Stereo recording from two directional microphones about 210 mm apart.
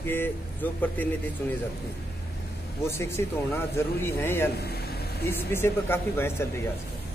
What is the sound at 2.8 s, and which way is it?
A man's voice, 10° left (ahead or behind).